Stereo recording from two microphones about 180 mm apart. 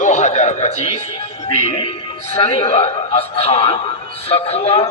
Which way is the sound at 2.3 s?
35° left (ahead or behind).